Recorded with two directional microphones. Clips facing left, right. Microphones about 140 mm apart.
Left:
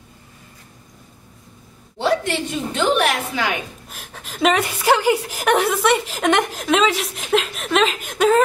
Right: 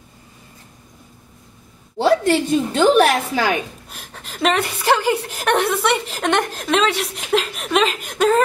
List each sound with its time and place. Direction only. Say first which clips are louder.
2.0 s a woman's voice: right 5 dB; 35° right (ahead or behind)
3.9 s a woman's voice: even; centre (ahead or behind)